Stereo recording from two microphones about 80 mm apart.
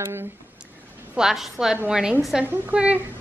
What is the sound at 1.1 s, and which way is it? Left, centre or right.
A woman's voice, centre.